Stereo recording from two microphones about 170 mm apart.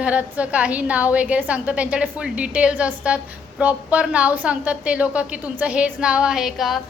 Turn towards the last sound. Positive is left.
turn(degrees=0)  # may be behind; listen again after turning